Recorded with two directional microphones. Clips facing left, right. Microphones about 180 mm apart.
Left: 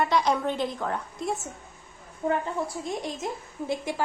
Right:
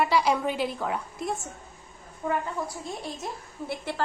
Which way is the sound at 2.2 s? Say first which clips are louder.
Left 2 dB; 30° left (ahead or behind).